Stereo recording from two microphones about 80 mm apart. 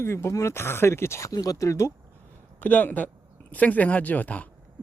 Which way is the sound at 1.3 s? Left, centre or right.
Left.